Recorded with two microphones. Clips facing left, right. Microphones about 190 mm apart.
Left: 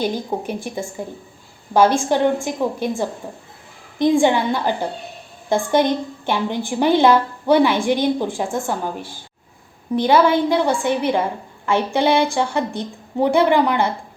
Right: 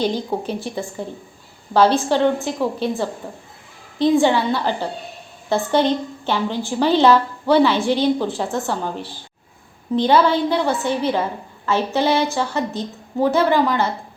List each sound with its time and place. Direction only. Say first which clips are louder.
0.0 s a woman's voice: right 1 dB; 10° left (ahead or behind)
4.2 s a woman's voice: even; 15° left (ahead or behind)
9.9 s a woman's voice: left 1 dB; 10° left (ahead or behind)